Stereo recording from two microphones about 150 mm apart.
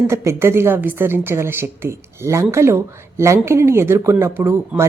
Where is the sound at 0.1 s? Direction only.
20° right (ahead or behind).